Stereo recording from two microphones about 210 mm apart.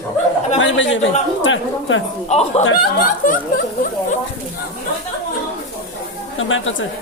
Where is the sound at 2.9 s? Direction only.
45° left (ahead or behind).